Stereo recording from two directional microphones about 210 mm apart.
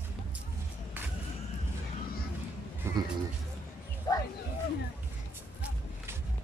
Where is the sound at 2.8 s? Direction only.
10° right (ahead or behind).